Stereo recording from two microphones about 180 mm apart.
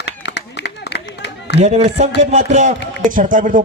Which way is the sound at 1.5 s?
40° right (ahead or behind).